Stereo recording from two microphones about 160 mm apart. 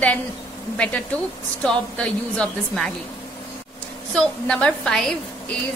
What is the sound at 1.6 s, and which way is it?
Speech, 5° left (ahead or behind).